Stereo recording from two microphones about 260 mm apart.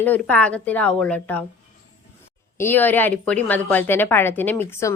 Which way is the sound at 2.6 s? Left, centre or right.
Centre.